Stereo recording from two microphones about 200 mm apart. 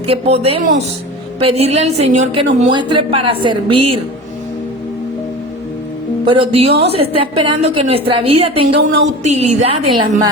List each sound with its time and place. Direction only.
0.1 s a woman's voice: 30° right (ahead or behind)
2.7 s a woman's voice: 25° right (ahead or behind)
6.3 s a woman's voice: 30° right (ahead or behind)
8.7 s speech: 65° right (ahead or behind)
9.2 s a woman's voice: 35° right (ahead or behind)